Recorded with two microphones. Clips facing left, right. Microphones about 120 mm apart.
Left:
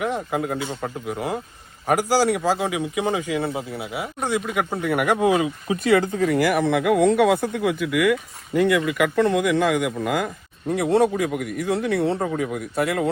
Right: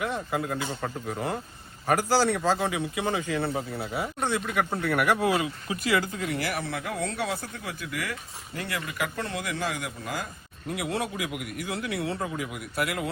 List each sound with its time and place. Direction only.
0.0 s speech: 20° left (ahead or behind)
3.8 s speech: 5° left (ahead or behind)
4.3 s speech: 15° left (ahead or behind)
6.2 s speech: 50° left (ahead or behind)
10.8 s speech: 30° left (ahead or behind)
11.1 s a man's voice: 45° left (ahead or behind)
11.8 s speech: 60° left (ahead or behind)
12.4 s speech: 30° left (ahead or behind)